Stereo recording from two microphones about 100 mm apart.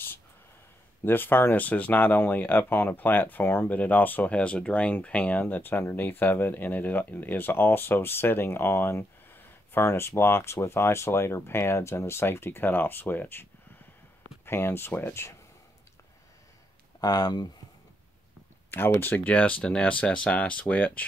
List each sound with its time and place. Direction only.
1.0 s speech: 20° left (ahead or behind)
17.0 s speech: 40° left (ahead or behind)
18.7 s speech: 20° left (ahead or behind)